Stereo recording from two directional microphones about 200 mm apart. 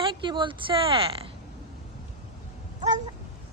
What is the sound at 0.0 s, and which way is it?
Speech, 25° right (ahead or behind).